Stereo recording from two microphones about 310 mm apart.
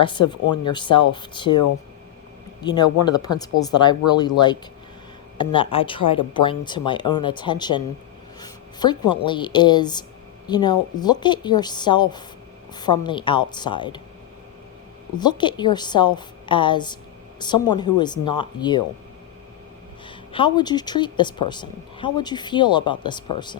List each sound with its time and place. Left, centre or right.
0.0 s speech: centre
0.4 s speech: left
0.7 s speech: centre
2.6 s speech: centre
15.2 s speech: centre
20.1 s speech: centre